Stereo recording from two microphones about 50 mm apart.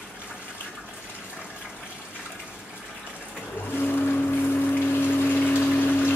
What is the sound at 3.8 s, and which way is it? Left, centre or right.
Vehicle, left.